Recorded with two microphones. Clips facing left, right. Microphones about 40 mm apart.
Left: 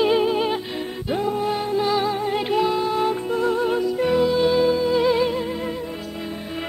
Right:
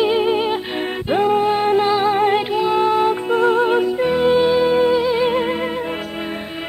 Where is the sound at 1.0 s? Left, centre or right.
Right.